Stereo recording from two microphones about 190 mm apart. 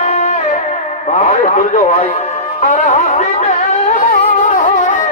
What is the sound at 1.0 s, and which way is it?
Radio, 35° left (ahead or behind).